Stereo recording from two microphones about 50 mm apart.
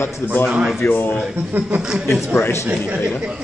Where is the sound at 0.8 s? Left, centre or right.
Left.